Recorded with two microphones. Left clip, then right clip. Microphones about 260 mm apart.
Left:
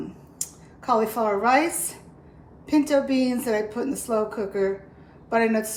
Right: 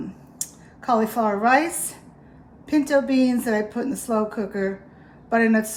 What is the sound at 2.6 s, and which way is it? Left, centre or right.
A woman's voice, right.